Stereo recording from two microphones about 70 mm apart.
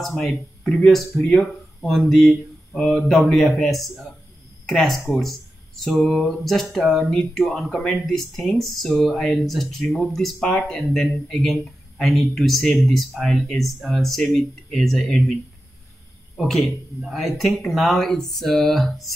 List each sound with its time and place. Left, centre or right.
0.0 s speech: centre
16.3 s speech: centre